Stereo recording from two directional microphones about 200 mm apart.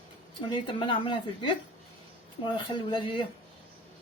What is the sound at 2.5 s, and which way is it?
Speech, 25° left (ahead or behind).